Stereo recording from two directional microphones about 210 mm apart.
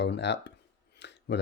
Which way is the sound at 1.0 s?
55° left (ahead or behind).